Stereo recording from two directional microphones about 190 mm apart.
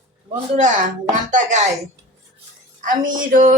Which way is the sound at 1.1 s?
40° right (ahead or behind).